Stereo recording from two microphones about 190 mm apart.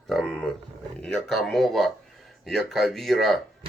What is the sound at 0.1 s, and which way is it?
Speech, centre (ahead or behind).